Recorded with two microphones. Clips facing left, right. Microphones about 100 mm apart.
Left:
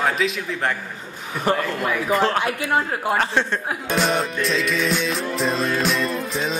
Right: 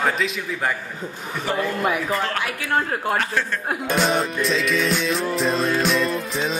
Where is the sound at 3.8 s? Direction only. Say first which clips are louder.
Right 1 dB; centre (ahead or behind).